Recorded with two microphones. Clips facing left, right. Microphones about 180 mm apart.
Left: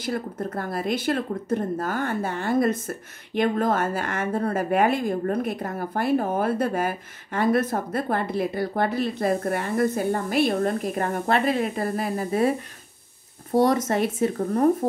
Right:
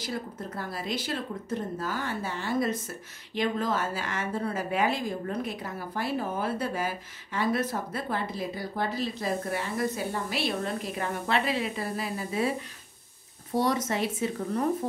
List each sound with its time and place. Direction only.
0.0 s speech: 55° left (ahead or behind)
13.6 s speech: 50° left (ahead or behind)